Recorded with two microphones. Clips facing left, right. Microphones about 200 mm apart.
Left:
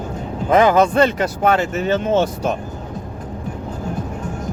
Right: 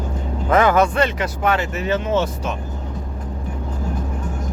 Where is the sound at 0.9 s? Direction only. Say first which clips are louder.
Left 4 dB; 45° left (ahead or behind).